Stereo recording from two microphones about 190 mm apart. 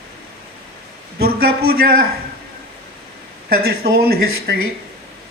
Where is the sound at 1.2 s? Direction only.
55° right (ahead or behind).